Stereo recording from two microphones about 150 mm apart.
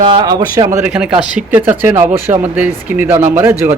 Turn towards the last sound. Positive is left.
turn(degrees=-15)  # may be behind; listen again after turning